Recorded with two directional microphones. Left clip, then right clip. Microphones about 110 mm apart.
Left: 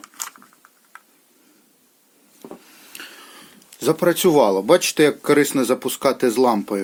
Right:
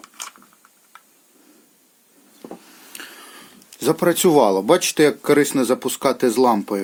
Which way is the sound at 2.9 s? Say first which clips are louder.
Even; 30° right (ahead or behind).